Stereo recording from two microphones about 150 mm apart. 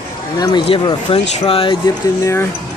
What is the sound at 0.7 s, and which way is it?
Speech, 35° left (ahead or behind).